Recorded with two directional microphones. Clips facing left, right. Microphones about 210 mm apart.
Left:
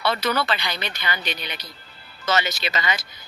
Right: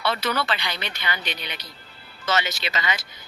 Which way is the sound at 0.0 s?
40° left (ahead or behind).